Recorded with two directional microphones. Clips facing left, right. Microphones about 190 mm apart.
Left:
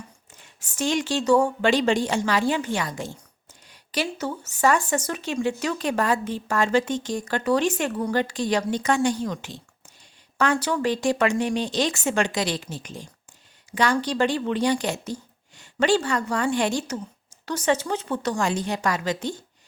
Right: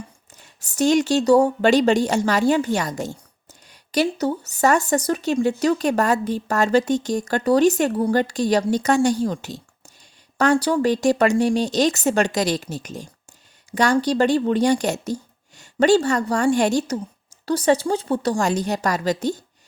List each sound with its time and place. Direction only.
0.6 s speech: 40° right (ahead or behind)